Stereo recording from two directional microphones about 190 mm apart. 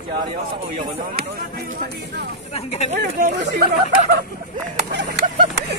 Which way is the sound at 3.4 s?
60° right (ahead or behind).